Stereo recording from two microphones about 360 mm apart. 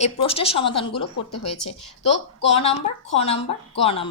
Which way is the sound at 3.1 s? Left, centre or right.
Centre.